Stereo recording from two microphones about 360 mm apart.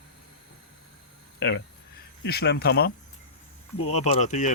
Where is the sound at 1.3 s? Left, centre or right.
Left.